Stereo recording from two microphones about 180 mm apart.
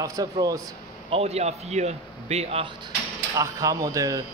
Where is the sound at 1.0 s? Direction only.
35° right (ahead or behind).